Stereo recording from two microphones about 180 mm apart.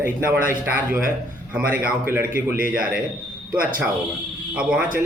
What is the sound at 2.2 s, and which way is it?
Speech, 55° right (ahead or behind).